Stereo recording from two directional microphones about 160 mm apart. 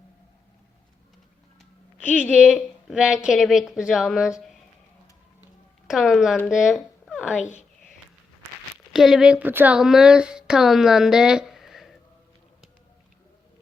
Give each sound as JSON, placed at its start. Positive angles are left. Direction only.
{"t": 2.0, "sound": "a woman's voice", "side_deg": -5}
{"t": 5.9, "sound": "a woman's voice", "side_deg": 0}
{"t": 7.3, "sound": "speech", "side_deg": 50}
{"t": 8.9, "sound": "speech", "side_deg": 0}